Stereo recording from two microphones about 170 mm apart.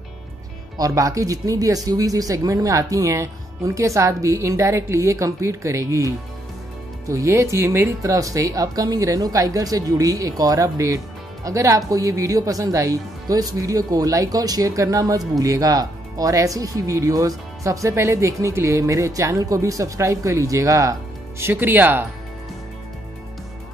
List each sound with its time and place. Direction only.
0.7 s speech: 20° right (ahead or behind)